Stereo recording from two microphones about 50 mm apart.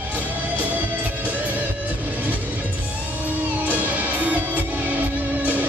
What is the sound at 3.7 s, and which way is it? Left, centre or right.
Music, right.